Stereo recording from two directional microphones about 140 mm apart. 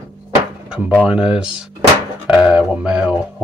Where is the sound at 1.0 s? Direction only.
5° right (ahead or behind).